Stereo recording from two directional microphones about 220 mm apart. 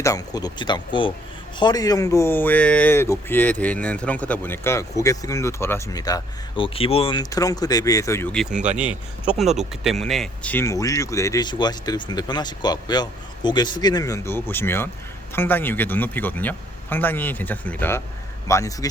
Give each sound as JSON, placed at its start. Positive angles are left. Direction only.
{"t": 0.0, "sound": "speech", "side_deg": 15}
{"t": 8.5, "sound": "speech", "side_deg": -35}
{"t": 8.8, "sound": "speech", "side_deg": -5}